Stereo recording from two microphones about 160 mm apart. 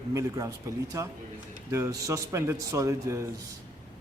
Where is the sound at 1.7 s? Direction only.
20° right (ahead or behind).